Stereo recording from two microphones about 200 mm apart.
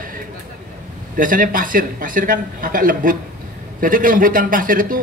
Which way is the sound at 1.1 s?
40° right (ahead or behind).